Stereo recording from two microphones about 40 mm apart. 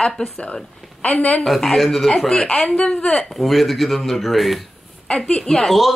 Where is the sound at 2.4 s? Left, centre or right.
Left.